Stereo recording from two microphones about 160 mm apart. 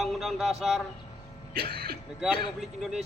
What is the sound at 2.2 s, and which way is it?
Speech, centre (ahead or behind).